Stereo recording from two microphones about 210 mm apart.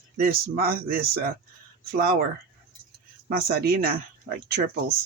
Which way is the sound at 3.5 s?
45° right (ahead or behind).